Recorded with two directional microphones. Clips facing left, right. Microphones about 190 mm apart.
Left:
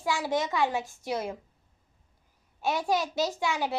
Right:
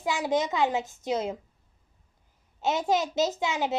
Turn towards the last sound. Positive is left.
turn(degrees=-20)  # may be behind; listen again after turning